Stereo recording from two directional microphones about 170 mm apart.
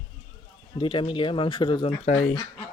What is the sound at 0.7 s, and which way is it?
Speech, 30° left (ahead or behind).